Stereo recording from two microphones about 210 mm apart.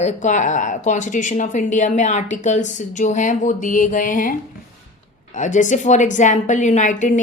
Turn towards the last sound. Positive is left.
turn(degrees=35)  # may be behind; listen again after turning